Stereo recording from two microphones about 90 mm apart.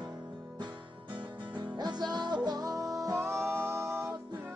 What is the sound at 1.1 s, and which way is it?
Music, 60° right (ahead or behind).